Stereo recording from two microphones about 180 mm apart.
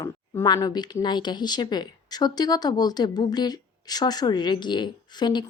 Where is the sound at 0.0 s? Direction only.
20° left (ahead or behind).